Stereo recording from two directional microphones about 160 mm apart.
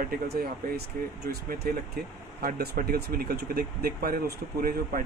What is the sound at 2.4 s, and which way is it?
Speech, 75° right (ahead or behind).